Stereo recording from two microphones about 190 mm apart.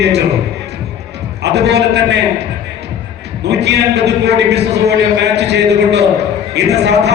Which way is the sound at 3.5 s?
60° right (ahead or behind).